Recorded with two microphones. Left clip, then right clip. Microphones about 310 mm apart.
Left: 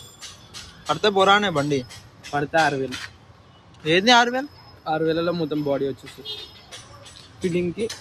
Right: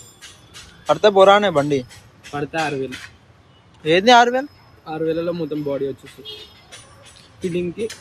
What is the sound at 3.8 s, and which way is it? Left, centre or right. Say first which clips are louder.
Speech: right 4 dB; centre.